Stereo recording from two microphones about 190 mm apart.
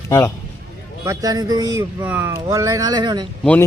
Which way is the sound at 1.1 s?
20° right (ahead or behind).